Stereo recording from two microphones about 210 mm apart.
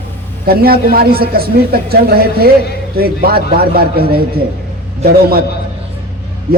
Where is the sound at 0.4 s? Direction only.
45° right (ahead or behind).